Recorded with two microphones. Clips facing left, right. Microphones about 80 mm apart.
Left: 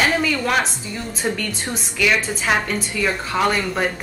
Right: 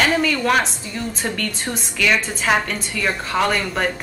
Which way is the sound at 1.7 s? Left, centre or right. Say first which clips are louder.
Even; centre.